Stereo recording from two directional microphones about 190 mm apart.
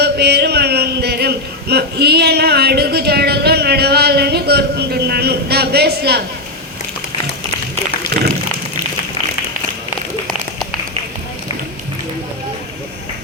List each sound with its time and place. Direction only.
0.0 s speech: 60° right (ahead or behind)